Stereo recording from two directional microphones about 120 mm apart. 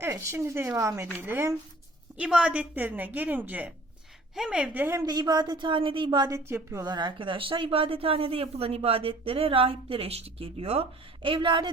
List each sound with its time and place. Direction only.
0.0 s speech: 20° right (ahead or behind)
2.1 s a woman's voice: 10° right (ahead or behind)
5.0 s a woman's voice: 35° right (ahead or behind)
6.3 s speech: 25° right (ahead or behind)
6.8 s speech: 40° right (ahead or behind)